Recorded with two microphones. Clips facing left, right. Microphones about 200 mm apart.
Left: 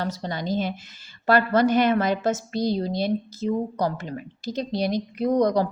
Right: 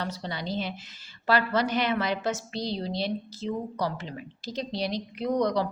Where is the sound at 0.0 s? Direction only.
45° left (ahead or behind).